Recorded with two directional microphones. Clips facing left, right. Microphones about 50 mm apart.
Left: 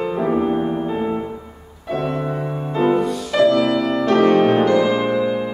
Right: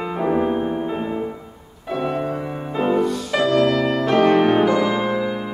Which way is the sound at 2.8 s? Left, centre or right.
Centre.